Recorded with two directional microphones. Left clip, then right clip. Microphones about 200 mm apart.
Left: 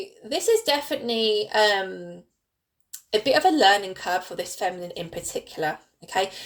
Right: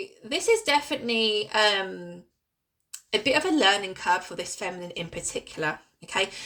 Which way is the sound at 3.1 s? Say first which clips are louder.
Left 4 dB; 20° right (ahead or behind).